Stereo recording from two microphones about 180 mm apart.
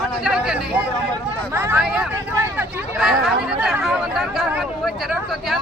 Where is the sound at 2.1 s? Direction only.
15° right (ahead or behind).